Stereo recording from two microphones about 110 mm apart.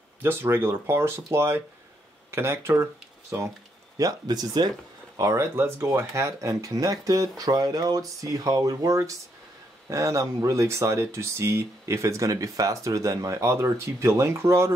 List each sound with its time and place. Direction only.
0.2 s speech: 20° right (ahead or behind)
4.0 s speech: 35° right (ahead or behind)